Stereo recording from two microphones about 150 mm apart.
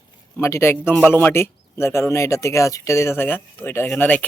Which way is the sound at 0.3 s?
15° left (ahead or behind).